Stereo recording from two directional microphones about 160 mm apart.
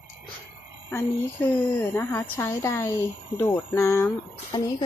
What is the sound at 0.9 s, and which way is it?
A woman's voice, 10° left (ahead or behind).